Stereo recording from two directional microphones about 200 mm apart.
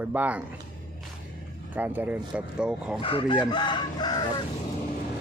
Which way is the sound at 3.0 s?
25° left (ahead or behind).